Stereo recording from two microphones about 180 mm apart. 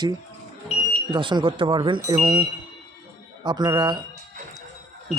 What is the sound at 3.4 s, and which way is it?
Speech, 25° right (ahead or behind).